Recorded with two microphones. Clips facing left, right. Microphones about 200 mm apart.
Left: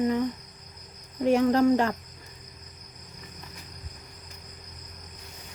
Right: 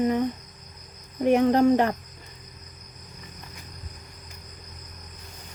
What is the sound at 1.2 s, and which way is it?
Speech, 20° right (ahead or behind).